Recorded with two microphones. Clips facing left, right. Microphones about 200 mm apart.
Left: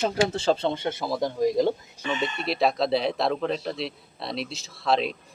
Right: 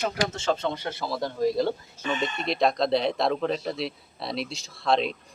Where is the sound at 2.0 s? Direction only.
5° left (ahead or behind).